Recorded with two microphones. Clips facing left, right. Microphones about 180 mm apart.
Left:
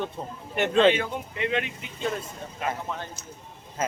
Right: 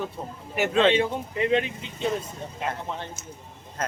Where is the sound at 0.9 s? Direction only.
30° right (ahead or behind).